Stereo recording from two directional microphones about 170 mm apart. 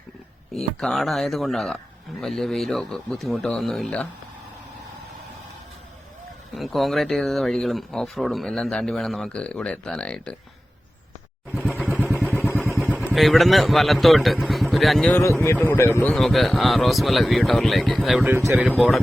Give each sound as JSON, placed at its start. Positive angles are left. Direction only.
{"t": 0.5, "sound": "speech", "side_deg": 0}
{"t": 6.5, "sound": "speech", "side_deg": 0}
{"t": 11.5, "sound": "vehicle", "side_deg": -5}
{"t": 12.7, "sound": "vehicle", "side_deg": 5}
{"t": 13.1, "sound": "speech", "side_deg": 0}
{"t": 15.1, "sound": "speech", "side_deg": 15}
{"t": 16.1, "sound": "speech", "side_deg": 0}